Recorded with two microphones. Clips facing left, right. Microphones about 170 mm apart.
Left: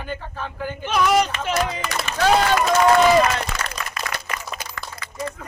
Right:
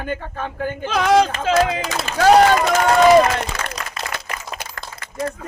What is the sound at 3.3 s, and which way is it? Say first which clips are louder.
Applause: right 2 dB; 60° right (ahead or behind).